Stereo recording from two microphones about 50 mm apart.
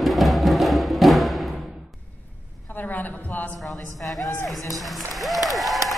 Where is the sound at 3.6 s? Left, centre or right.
Centre.